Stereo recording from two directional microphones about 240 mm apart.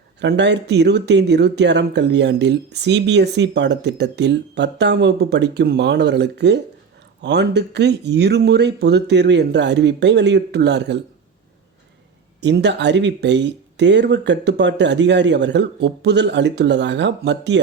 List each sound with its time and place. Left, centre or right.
0.2 s speech: right
12.4 s speech: right